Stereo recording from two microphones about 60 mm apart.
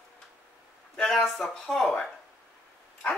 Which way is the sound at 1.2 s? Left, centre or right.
Centre.